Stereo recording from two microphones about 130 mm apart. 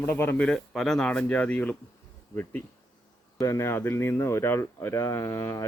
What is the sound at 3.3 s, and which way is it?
Speech, 20° left (ahead or behind).